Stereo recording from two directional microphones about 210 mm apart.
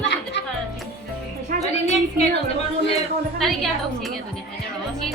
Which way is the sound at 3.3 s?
Centre (ahead or behind).